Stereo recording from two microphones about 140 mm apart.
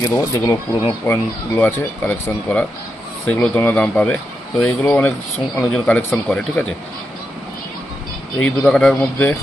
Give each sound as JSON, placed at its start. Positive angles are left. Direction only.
{"t": 0.0, "sound": "speech", "side_deg": 25}
{"t": 1.0, "sound": "speech", "side_deg": 15}
{"t": 8.4, "sound": "speech", "side_deg": 5}